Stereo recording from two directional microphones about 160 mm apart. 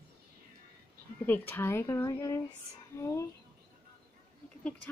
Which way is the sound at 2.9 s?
15° left (ahead or behind).